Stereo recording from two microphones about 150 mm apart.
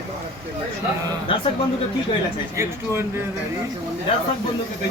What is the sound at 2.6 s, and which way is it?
Speech, 15° right (ahead or behind).